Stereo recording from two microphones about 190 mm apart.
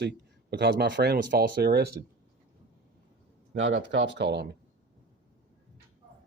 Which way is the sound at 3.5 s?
70° right (ahead or behind).